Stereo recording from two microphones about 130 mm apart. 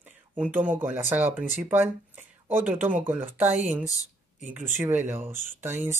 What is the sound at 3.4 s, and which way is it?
Mantra, 65° right (ahead or behind).